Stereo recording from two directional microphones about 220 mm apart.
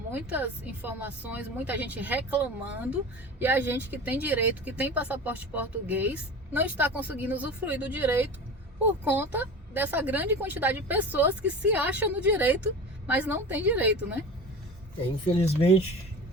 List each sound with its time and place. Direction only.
0.1 s speech: 5° right (ahead or behind)
15.3 s speech: 25° left (ahead or behind)